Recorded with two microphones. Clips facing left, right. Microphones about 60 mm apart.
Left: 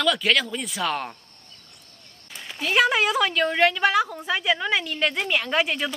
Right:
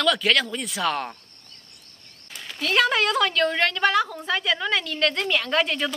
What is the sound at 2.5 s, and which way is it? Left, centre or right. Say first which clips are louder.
A woman's voice: left 1 dB; centre.